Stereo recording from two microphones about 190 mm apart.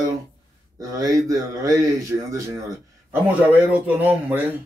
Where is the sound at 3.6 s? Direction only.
10° right (ahead or behind).